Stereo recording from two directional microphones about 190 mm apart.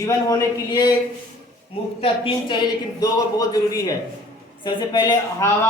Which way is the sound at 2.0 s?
25° left (ahead or behind).